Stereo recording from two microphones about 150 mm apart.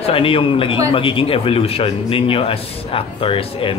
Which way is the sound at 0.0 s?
40° left (ahead or behind).